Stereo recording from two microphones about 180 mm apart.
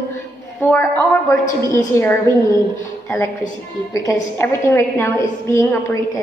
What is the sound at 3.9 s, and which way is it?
A woman's voice, 15° left (ahead or behind).